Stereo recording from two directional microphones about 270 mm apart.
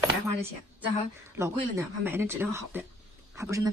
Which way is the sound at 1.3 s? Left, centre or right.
Centre.